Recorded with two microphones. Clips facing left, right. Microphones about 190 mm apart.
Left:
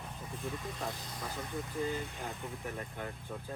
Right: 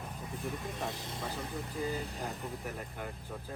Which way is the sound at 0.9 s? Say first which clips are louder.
Right 2 dB; 25° right (ahead or behind).